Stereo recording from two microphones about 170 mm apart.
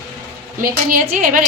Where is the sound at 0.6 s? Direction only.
55° right (ahead or behind).